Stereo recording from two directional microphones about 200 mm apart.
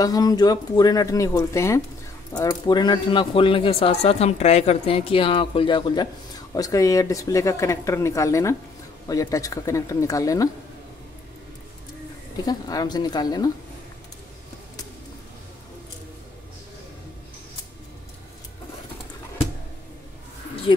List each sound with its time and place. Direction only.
0.0 s speech: 20° left (ahead or behind)
12.4 s speech: 20° left (ahead or behind)
20.7 s speech: 25° left (ahead or behind)